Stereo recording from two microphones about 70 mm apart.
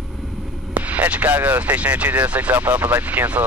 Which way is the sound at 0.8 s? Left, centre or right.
Right.